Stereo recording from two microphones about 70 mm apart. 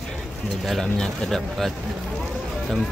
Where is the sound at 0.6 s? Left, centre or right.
Centre.